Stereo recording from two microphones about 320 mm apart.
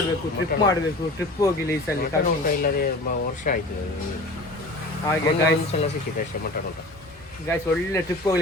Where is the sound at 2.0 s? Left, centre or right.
Left.